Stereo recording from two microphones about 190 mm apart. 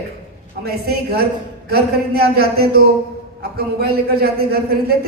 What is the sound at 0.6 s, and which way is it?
A man's voice, 55° right (ahead or behind).